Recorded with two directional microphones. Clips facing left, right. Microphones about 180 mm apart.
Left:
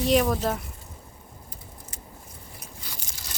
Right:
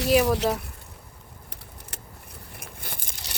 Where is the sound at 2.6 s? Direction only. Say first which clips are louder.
Right 4 dB; 55° right (ahead or behind).